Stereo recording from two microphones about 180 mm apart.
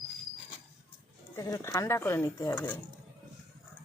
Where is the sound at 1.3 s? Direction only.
20° left (ahead or behind).